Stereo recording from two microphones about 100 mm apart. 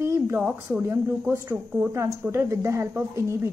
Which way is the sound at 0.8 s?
20° right (ahead or behind).